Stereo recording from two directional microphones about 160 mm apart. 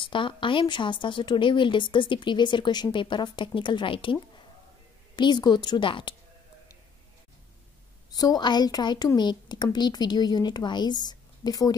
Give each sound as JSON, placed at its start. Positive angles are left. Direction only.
{"t": 0.0, "sound": "a woman's voice", "side_deg": 30}
{"t": 8.1, "sound": "a woman's voice", "side_deg": 25}